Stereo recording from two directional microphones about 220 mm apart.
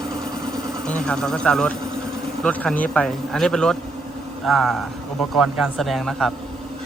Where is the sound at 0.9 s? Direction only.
5° left (ahead or behind).